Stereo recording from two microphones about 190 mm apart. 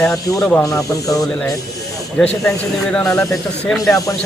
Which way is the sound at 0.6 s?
15° left (ahead or behind).